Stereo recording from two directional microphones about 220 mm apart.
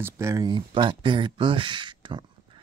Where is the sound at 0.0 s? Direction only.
15° right (ahead or behind).